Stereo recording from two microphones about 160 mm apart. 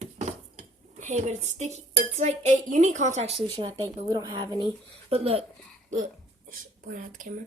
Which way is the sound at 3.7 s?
20° right (ahead or behind).